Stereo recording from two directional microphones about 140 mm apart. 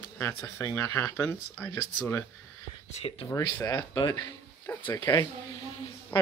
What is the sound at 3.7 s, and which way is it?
Speech, 30° left (ahead or behind).